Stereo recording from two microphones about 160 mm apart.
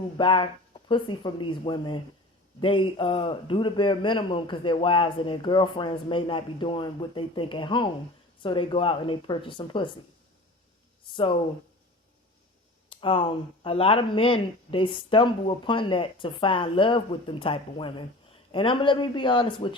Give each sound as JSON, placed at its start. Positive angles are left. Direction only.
{"t": 0.2, "sound": "a man's voice", "side_deg": 35}
{"t": 12.9, "sound": "a man's voice", "side_deg": 35}